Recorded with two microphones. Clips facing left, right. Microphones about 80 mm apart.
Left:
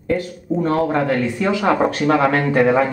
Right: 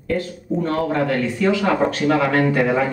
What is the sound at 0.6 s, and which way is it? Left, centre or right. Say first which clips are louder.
Speech: left 2 dB; left.